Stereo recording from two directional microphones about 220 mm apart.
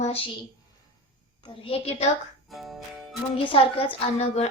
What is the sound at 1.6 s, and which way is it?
Speech, 25° left (ahead or behind).